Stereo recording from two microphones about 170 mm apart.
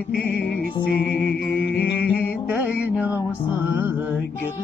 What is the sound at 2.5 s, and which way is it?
Music, 5° right (ahead or behind).